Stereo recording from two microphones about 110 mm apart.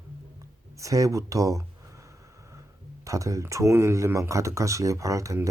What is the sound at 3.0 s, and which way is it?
Speech, 30° right (ahead or behind).